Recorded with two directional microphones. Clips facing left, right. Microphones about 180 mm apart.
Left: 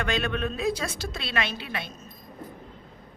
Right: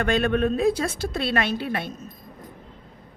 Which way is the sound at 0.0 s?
50° right (ahead or behind).